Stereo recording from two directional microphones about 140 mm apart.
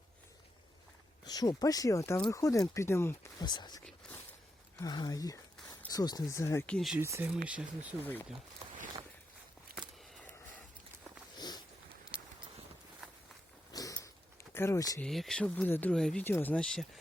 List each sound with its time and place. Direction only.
1.2 s speech: 30° left (ahead or behind)
3.4 s speech: 30° left (ahead or behind)
6.7 s speech: 5° left (ahead or behind)
6.9 s speech: 15° right (ahead or behind)
8.0 s speech: 15° left (ahead or behind)
9.7 s a sound: 90° right
11.3 s a sound: 30° left (ahead or behind)
13.7 s a sound: 25° left (ahead or behind)
14.5 s speech: 20° left (ahead or behind)
15.0 s speech: centre (ahead or behind)